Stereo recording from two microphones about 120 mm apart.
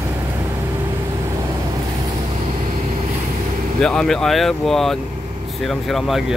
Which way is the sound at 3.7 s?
5° left (ahead or behind).